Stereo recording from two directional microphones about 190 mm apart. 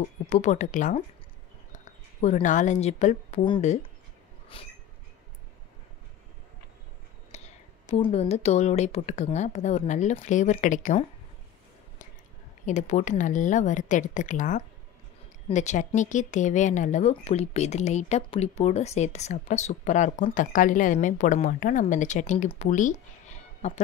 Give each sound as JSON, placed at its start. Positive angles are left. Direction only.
{"t": 0.3, "sound": "speech", "side_deg": 40}
{"t": 2.2, "sound": "speech", "side_deg": 40}
{"t": 4.6, "sound": "train", "side_deg": 30}
{"t": 7.3, "sound": "a sound", "side_deg": 35}
{"t": 7.9, "sound": "speech", "side_deg": 35}
{"t": 12.6, "sound": "speech", "side_deg": 40}